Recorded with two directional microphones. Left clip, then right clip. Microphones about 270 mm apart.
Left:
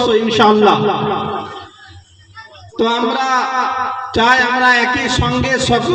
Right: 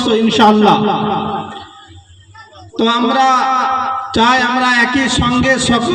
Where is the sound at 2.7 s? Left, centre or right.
Right.